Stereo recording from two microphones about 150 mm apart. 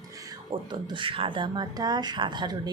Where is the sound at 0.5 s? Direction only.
30° right (ahead or behind).